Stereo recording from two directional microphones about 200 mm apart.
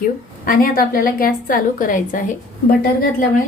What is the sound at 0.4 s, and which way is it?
A woman's voice, 45° left (ahead or behind).